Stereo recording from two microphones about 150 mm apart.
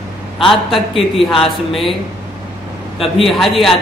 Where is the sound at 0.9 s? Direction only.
35° left (ahead or behind).